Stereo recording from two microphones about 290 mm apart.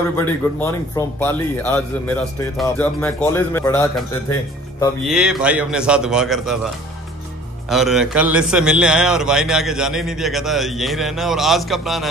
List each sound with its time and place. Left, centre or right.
0.2 s a man's voice: centre
5.0 s a man's voice: centre
7.7 s a man's voice: centre